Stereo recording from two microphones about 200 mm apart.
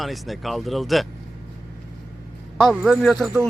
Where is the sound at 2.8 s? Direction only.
Centre (ahead or behind).